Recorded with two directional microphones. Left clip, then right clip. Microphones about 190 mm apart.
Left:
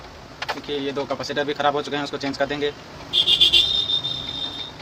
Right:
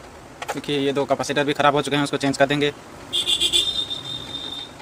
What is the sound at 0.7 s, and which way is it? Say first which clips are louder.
Speech: right 7 dB; 45° right (ahead or behind).